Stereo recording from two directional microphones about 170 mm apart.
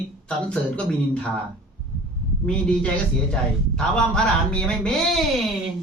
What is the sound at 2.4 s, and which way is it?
Speech, 5° left (ahead or behind).